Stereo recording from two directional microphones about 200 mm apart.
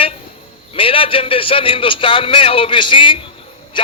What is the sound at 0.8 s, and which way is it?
Music, 25° left (ahead or behind).